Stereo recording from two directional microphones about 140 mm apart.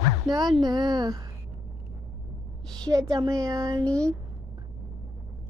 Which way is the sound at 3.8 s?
10° left (ahead or behind).